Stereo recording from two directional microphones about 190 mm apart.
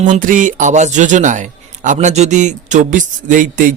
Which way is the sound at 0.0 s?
45° right (ahead or behind).